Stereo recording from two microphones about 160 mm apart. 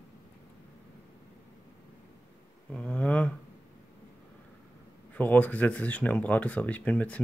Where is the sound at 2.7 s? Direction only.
10° left (ahead or behind).